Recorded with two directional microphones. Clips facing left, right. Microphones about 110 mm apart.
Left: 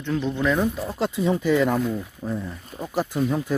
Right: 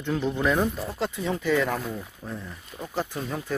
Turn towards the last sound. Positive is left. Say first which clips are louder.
# left 8 dB
turn(degrees=5)  # may be behind; listen again after turning